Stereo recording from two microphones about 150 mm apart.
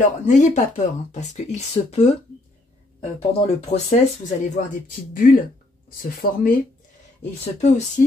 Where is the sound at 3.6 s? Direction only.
50° left (ahead or behind).